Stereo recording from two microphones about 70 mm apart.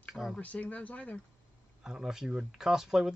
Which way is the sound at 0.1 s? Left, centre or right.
Centre.